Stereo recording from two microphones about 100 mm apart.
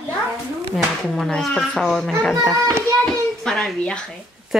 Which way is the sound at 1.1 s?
5° left (ahead or behind).